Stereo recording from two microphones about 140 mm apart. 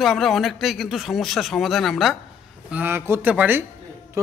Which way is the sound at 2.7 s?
15° right (ahead or behind).